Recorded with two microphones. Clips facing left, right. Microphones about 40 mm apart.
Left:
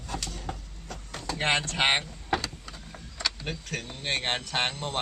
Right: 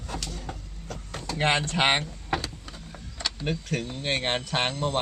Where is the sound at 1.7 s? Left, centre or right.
Centre.